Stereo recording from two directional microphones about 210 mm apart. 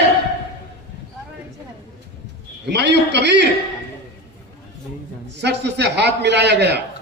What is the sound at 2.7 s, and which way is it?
Speech, 55° right (ahead or behind).